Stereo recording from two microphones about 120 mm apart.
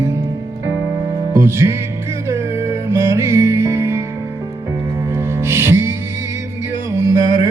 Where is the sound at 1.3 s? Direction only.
20° right (ahead or behind).